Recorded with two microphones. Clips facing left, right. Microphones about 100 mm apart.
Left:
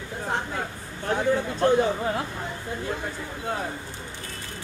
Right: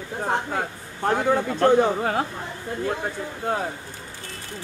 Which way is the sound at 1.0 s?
50° right (ahead or behind).